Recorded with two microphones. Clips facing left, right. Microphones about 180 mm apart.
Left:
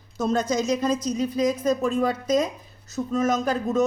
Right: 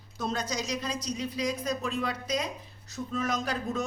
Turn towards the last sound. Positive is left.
turn(degrees=45)  # may be behind; listen again after turning